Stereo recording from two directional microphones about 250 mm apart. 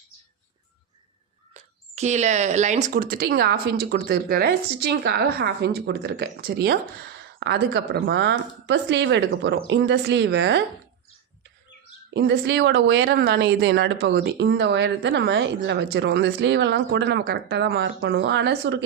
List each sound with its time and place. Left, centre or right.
2.0 s a woman's voice: right
12.1 s speech: right